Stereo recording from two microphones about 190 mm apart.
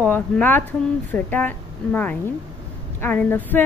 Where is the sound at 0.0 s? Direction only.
10° left (ahead or behind).